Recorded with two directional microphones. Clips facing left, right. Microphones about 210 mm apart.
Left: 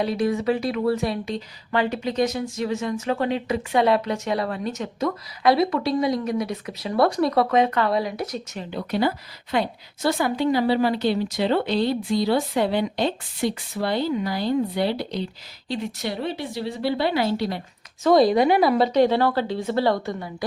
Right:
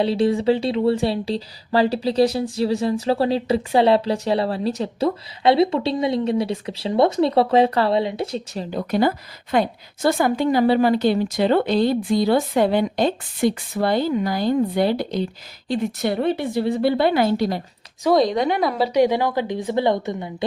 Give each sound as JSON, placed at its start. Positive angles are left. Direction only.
{"t": 0.0, "sound": "speech", "side_deg": -30}
{"t": 8.7, "sound": "a woman's voice", "side_deg": -45}
{"t": 18.1, "sound": "a woman's voice", "side_deg": 5}
{"t": 18.9, "sound": "speech", "side_deg": -10}